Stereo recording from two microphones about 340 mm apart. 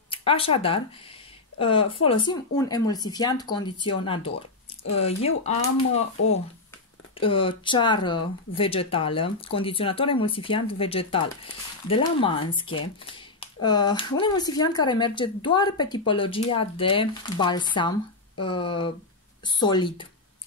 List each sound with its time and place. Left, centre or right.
0.1 s speech: centre
7.2 s speech: centre